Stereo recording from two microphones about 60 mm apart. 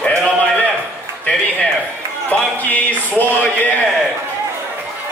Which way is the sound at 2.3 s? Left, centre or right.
Left.